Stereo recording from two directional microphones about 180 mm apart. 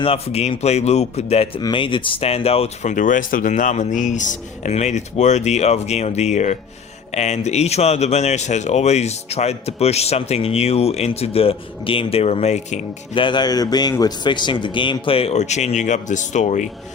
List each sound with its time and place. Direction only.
0.0 s speech: 35° left (ahead or behind)
13.2 s a man's voice: 25° left (ahead or behind); by 16.6 s 40° left (ahead or behind)